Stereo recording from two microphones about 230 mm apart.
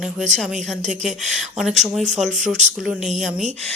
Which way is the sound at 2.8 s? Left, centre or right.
Centre.